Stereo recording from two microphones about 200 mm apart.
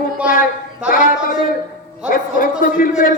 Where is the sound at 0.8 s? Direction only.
45° left (ahead or behind).